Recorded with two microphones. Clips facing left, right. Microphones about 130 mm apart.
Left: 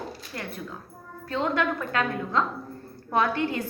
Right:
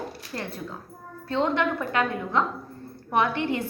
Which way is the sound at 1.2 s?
25° right (ahead or behind).